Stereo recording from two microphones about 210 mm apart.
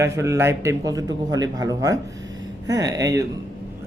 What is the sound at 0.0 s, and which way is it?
Speech, 15° right (ahead or behind).